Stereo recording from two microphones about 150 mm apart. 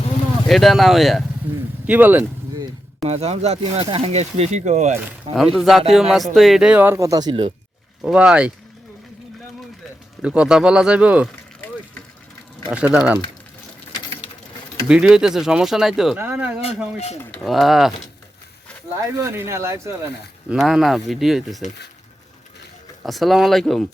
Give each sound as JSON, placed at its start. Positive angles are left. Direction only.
{"t": 0.4, "sound": "speech", "side_deg": 0}
{"t": 1.9, "sound": "speech", "side_deg": -10}
{"t": 3.0, "sound": "speech", "side_deg": -45}
{"t": 5.5, "sound": "speech", "side_deg": 0}
{"t": 8.0, "sound": "speech", "side_deg": -5}
{"t": 10.2, "sound": "speech", "side_deg": -5}
{"t": 12.7, "sound": "speech", "side_deg": -10}
{"t": 13.9, "sound": "sewing machine", "side_deg": 30}
{"t": 14.8, "sound": "speech", "side_deg": -5}
{"t": 17.4, "sound": "speech", "side_deg": 0}
{"t": 19.2, "sound": "speech", "side_deg": -15}
{"t": 20.5, "sound": "speech", "side_deg": 0}
{"t": 23.0, "sound": "speech", "side_deg": 0}